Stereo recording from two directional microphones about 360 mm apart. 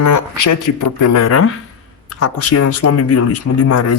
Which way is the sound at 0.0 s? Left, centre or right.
Left.